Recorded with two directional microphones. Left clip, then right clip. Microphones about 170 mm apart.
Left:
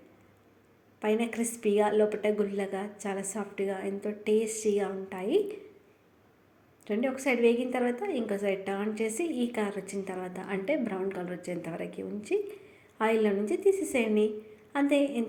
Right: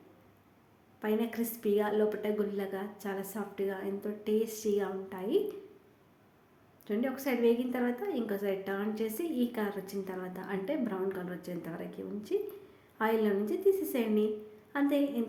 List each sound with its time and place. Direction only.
1.0 s a woman's voice: 10° left (ahead or behind)
6.8 s a woman's voice: 10° left (ahead or behind)